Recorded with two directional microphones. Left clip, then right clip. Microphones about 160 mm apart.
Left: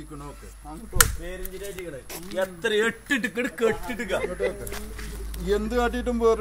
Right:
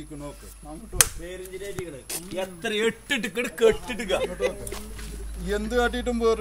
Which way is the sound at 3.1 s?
75° right (ahead or behind).